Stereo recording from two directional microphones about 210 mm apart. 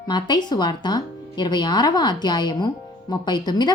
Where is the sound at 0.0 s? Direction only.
20° left (ahead or behind).